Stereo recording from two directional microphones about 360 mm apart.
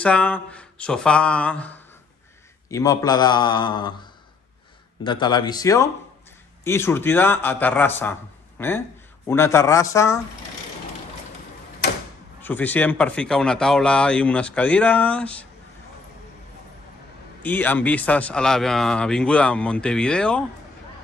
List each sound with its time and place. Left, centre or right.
0.0 s a man's voice: centre
12.4 s speech: centre
17.4 s speech: centre